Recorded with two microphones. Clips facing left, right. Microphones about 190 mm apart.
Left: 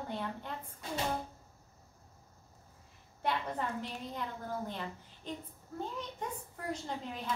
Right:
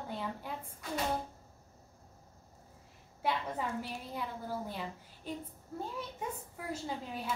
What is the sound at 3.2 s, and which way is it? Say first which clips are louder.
A woman's voice: even; 5° right (ahead or behind).